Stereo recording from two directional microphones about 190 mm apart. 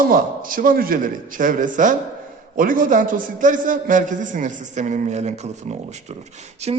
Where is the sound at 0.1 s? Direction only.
45° right (ahead or behind).